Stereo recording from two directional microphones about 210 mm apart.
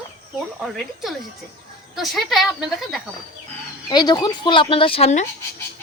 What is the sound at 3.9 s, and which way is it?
Speech, 20° left (ahead or behind).